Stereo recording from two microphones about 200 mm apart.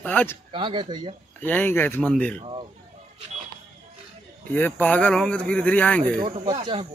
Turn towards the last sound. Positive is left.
turn(degrees=-25)  # may be behind; listen again after turning